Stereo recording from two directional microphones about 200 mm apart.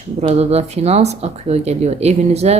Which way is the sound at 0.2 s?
30° right (ahead or behind).